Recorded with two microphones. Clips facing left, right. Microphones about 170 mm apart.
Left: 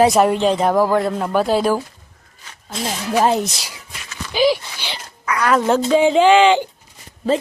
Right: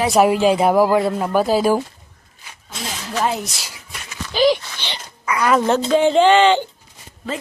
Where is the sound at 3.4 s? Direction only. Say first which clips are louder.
Left 6 dB; 15° left (ahead or behind).